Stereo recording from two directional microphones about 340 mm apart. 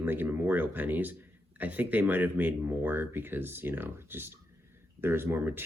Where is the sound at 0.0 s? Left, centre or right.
Centre.